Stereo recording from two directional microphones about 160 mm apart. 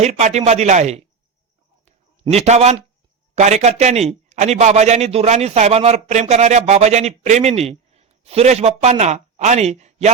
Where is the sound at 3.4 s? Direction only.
45° right (ahead or behind).